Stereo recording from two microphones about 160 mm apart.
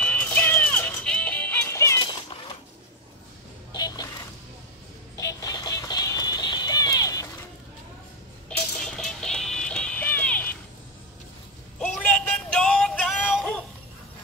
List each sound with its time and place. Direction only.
0.0 s music: 10° left (ahead or behind)
3.7 s a sound: 25° left (ahead or behind)
5.2 s music: 25° left (ahead or behind)
8.5 s music: 5° left (ahead or behind)
11.8 s music: 10° left (ahead or behind)